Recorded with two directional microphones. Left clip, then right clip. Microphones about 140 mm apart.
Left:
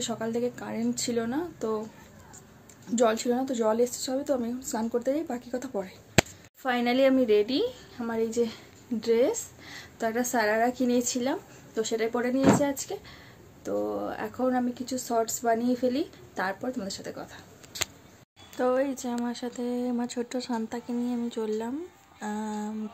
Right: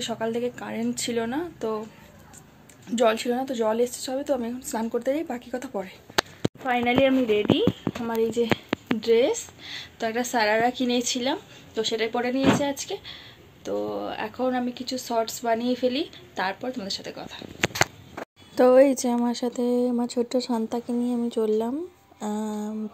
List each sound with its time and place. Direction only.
0.0 s speech: 10° left (ahead or behind)
2.9 s speech: 5° left (ahead or behind); by 7.6 s 10° right (ahead or behind)
8.0 s speech: 25° right (ahead or behind)
9.0 s speech: 5° left (ahead or behind)
9.9 s speech: 15° left (ahead or behind)
18.6 s speech: 50° right (ahead or behind); by 22.5 s 25° right (ahead or behind)